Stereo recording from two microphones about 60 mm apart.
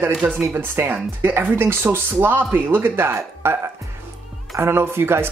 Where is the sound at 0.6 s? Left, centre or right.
Right.